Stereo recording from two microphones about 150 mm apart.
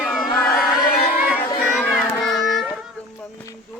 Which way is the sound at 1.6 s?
Centre (ahead or behind).